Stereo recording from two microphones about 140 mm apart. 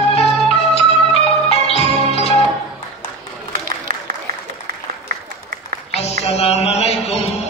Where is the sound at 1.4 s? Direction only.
45° left (ahead or behind).